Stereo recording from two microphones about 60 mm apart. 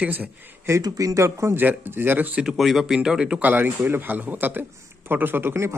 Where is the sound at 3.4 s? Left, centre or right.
Right.